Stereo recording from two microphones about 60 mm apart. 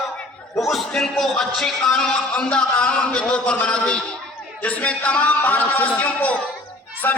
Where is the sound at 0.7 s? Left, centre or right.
Centre.